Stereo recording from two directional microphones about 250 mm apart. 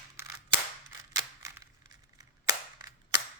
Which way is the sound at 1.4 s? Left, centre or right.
Centre.